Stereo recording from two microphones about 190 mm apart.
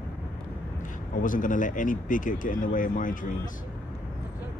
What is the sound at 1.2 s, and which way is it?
Speech, 45° left (ahead or behind).